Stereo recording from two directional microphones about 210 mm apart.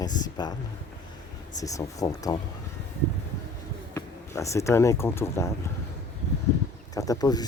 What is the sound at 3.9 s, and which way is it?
Speech, 15° left (ahead or behind).